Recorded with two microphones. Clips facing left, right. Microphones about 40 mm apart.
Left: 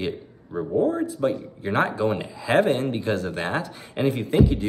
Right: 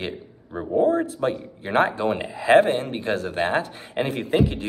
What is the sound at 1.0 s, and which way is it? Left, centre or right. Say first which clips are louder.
Speech: left 1 dB; right.